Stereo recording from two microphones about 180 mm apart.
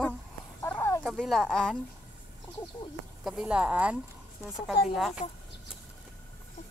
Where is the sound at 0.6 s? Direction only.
15° left (ahead or behind).